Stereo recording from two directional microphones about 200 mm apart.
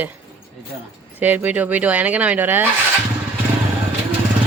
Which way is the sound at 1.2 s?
10° right (ahead or behind).